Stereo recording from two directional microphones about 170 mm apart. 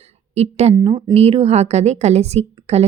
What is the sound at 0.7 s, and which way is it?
Speech, 25° right (ahead or behind).